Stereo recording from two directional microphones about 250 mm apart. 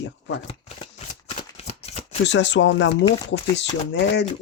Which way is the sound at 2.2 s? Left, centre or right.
Left.